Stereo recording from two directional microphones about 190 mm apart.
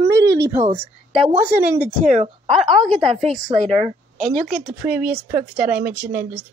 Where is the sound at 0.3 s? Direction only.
15° right (ahead or behind).